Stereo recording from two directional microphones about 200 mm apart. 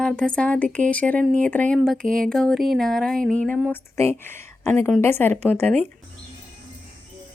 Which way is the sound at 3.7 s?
15° left (ahead or behind).